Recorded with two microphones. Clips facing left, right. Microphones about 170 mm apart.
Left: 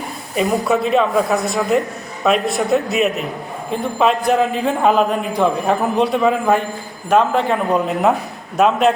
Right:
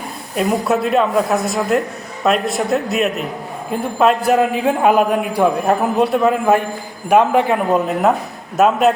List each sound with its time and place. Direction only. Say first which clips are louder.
0.3 s a man's voice: even; centre (ahead or behind)